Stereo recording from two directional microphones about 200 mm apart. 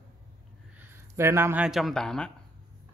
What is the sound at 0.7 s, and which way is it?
Speech, 10° right (ahead or behind).